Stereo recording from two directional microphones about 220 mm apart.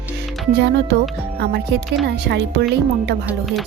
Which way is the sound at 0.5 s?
50° right (ahead or behind).